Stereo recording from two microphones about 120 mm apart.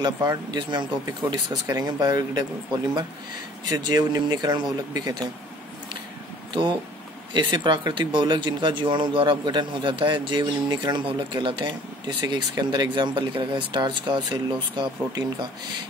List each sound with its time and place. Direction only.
0.0 s speech: 35° right (ahead or behind)
3.7 s speech: 35° right (ahead or behind)
6.5 s speech: 40° right (ahead or behind)